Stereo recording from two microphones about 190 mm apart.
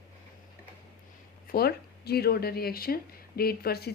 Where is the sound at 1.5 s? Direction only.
55° left (ahead or behind).